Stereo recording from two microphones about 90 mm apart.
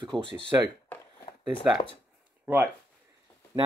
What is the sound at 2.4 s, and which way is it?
Speech, 20° right (ahead or behind).